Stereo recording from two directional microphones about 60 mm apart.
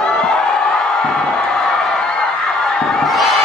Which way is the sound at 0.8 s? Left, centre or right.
Centre.